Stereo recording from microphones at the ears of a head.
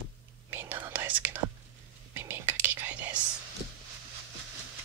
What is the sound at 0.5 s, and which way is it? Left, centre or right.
Whispering, right.